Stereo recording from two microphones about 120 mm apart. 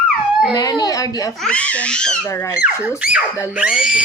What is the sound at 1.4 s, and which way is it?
Speech, 10° left (ahead or behind).